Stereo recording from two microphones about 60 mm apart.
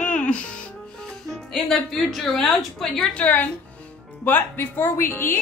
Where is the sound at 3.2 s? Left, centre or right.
Left.